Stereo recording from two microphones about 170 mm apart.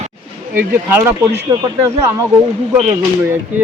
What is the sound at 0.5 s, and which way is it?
Speech, 15° right (ahead or behind).